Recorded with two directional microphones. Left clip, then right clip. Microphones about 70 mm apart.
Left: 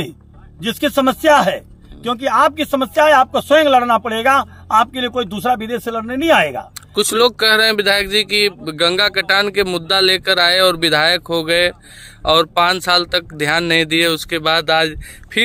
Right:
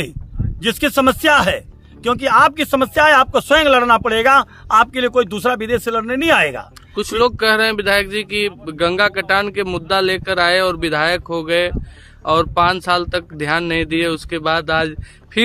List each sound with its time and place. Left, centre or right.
0.6 s a man's voice: right
7.0 s speech: left